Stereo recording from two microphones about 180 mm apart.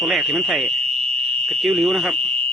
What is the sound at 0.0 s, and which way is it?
Speech, centre (ahead or behind).